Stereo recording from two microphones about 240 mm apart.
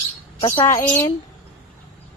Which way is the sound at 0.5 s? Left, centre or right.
Centre.